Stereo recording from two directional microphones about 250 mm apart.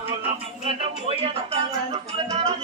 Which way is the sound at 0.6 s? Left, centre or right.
Right.